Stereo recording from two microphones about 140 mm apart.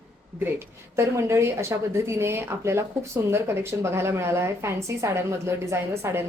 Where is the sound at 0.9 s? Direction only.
20° right (ahead or behind).